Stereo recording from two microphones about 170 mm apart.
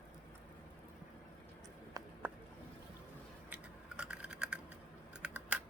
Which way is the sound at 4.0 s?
5° right (ahead or behind).